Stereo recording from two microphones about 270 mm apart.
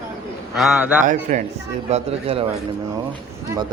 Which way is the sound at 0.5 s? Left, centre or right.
Centre.